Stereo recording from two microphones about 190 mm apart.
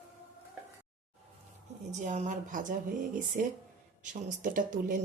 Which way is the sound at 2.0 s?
40° right (ahead or behind).